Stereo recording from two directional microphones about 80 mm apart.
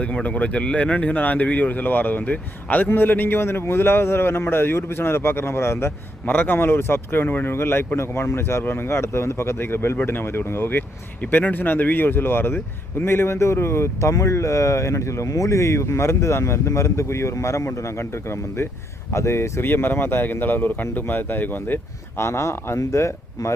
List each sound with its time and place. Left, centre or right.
0.0 s speech: centre
22.2 s speech: left